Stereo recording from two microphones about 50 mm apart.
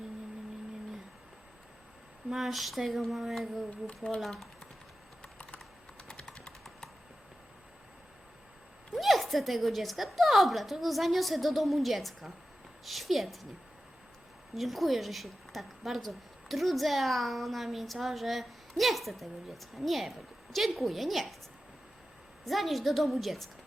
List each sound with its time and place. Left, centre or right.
2.3 s a woman's voice: centre
3.8 s speech: centre
5.2 s typing: left
6.1 s a sound: centre
9.0 s a woman's voice: centre
14.5 s a woman's voice: centre
22.4 s a woman's voice: centre